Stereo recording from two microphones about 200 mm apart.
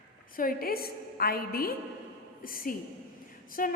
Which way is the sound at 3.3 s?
45° left (ahead or behind).